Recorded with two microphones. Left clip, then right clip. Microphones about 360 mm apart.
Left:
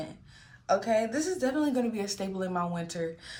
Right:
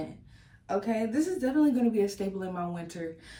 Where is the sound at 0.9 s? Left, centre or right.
Centre.